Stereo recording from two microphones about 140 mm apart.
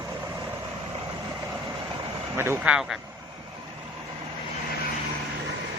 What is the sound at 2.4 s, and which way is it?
Speech, 15° right (ahead or behind).